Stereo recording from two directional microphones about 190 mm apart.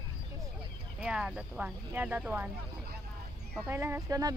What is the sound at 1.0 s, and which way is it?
Speech, 5° right (ahead or behind).